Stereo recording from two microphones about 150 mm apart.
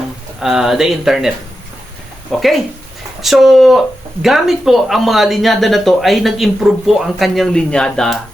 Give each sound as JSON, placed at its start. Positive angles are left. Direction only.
{"t": 0.4, "sound": "speech", "side_deg": -5}
{"t": 2.3, "sound": "speech", "side_deg": 5}